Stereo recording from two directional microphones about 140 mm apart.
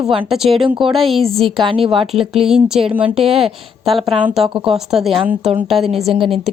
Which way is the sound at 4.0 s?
40° right (ahead or behind).